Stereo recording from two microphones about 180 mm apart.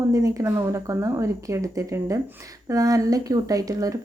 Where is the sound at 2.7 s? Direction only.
20° right (ahead or behind).